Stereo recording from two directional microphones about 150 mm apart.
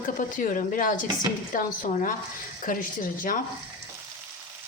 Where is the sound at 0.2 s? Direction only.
65° left (ahead or behind).